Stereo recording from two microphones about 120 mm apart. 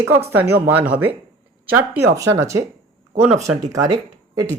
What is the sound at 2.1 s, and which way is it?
Speech, 25° right (ahead or behind).